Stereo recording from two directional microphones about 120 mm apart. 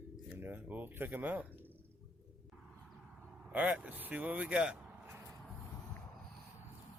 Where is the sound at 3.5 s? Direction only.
10° right (ahead or behind).